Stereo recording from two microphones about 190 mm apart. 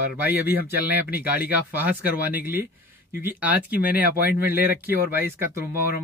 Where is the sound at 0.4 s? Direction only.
10° right (ahead or behind).